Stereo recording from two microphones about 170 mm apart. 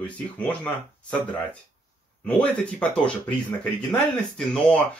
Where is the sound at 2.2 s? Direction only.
10° left (ahead or behind).